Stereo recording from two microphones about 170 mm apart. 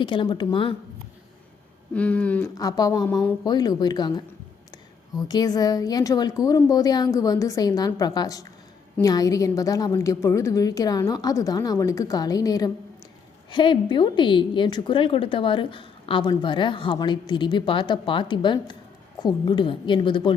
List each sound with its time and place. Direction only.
0.0 s a woman's voice: 30° left (ahead or behind)
1.9 s a sound: 10° left (ahead or behind)
2.6 s a woman's voice: 20° left (ahead or behind)